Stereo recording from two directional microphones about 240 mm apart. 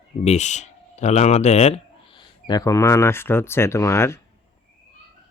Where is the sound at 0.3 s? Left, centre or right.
Left; by 4.2 s centre.